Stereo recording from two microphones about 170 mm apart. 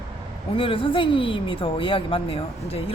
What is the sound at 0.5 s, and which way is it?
A woman's voice, 30° left (ahead or behind).